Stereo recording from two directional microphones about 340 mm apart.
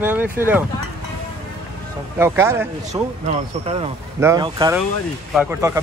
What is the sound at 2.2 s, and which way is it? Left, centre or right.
Speech, centre.